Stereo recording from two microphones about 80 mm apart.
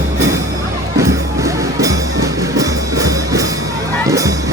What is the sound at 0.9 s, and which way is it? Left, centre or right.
Music, right.